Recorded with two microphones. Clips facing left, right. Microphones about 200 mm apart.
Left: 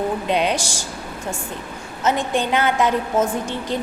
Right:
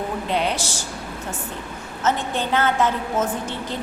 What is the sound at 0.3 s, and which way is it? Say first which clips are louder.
Speech: left 1 dB; 15° left (ahead or behind).